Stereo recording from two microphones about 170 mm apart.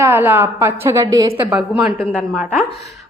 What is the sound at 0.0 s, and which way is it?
A woman's voice, 10° right (ahead or behind).